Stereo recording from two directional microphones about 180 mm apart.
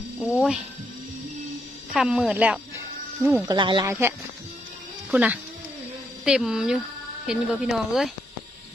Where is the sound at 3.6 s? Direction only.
25° right (ahead or behind).